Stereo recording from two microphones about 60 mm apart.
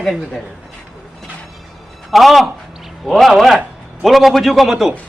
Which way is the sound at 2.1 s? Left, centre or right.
Centre.